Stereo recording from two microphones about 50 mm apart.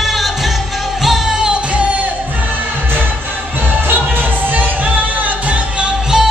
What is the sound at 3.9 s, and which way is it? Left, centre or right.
Music, right.